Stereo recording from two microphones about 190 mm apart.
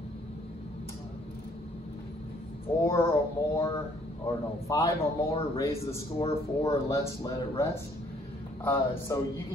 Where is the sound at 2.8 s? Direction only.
15° left (ahead or behind).